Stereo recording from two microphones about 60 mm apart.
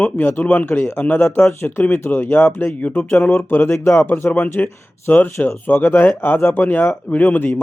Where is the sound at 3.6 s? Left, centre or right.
Left.